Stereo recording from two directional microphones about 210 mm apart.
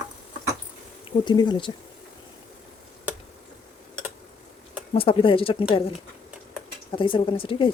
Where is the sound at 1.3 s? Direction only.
20° left (ahead or behind).